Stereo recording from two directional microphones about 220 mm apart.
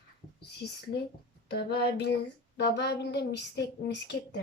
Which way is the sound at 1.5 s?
45° left (ahead or behind).